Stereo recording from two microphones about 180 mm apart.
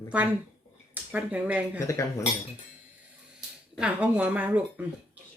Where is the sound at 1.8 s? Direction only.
15° left (ahead or behind).